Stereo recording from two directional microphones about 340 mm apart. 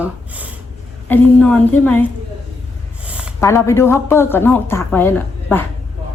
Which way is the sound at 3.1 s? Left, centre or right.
Centre.